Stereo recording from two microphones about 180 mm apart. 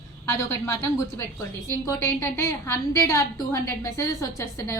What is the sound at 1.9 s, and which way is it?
A woman's voice, 15° left (ahead or behind).